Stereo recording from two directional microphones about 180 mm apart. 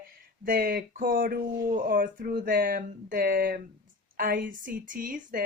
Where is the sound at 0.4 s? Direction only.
50° right (ahead or behind).